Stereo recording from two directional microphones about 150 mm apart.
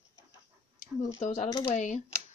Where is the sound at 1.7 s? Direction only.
50° left (ahead or behind).